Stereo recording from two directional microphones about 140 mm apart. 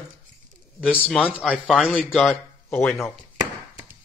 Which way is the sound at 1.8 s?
10° left (ahead or behind).